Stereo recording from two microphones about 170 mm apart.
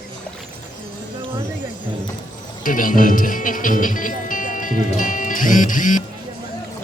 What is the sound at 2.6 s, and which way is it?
Speech, 55° left (ahead or behind).